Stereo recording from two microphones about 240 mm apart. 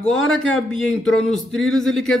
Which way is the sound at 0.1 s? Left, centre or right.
Centre.